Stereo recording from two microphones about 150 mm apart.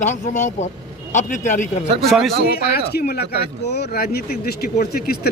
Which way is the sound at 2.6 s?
90° left.